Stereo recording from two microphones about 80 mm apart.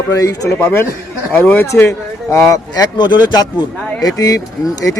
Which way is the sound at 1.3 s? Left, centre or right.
Centre.